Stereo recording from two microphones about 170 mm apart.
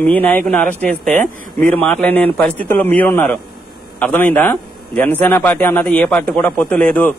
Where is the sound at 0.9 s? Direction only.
55° right (ahead or behind).